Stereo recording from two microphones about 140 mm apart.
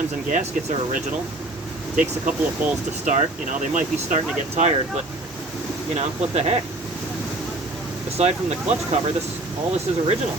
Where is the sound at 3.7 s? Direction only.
55° right (ahead or behind).